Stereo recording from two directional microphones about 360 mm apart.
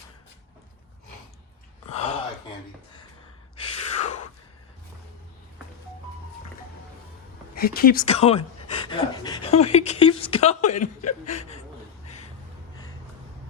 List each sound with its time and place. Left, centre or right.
1.9 s a sound: centre
3.6 s gasp: centre
7.5 s speech: left